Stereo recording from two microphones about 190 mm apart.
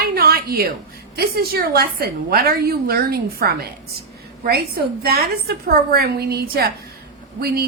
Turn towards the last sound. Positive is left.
turn(degrees=-55)  # may be behind; listen again after turning